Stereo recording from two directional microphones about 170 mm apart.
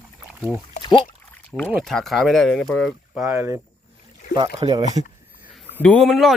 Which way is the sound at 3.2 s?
15° right (ahead or behind).